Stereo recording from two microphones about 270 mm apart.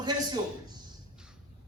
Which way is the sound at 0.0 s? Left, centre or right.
Centre.